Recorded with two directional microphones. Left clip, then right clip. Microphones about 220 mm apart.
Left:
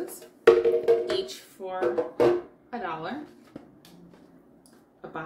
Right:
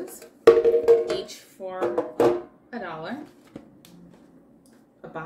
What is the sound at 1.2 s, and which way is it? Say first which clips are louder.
Speech: even; centre (ahead or behind).